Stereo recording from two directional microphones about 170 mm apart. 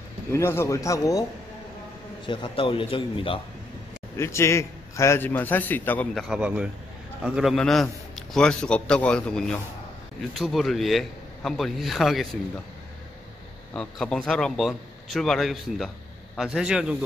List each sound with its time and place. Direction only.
0.3 s a man's voice: 15° left (ahead or behind)
2.2 s a man's voice: 30° left (ahead or behind)
4.2 s a man's voice: 15° left (ahead or behind); by 12.3 s centre (ahead or behind)
13.7 s a man's voice: 5° left (ahead or behind)